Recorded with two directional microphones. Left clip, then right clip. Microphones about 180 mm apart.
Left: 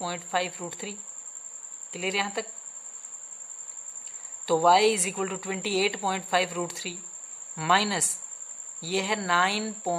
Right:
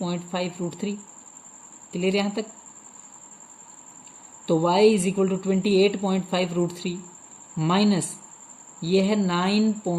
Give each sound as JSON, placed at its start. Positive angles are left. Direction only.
{"t": 0.0, "sound": "speech", "side_deg": 40}
{"t": 2.0, "sound": "speech", "side_deg": 35}
{"t": 4.4, "sound": "speech", "side_deg": 40}